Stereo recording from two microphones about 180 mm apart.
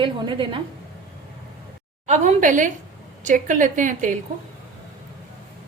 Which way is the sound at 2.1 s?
45° right (ahead or behind).